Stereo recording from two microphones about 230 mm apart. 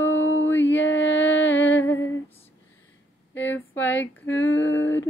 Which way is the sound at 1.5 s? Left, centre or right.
Centre.